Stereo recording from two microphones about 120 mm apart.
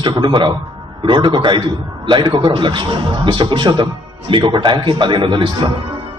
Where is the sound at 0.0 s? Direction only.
40° right (ahead or behind).